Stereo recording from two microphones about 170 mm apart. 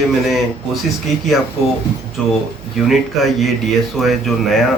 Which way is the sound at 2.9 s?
Centre (ahead or behind).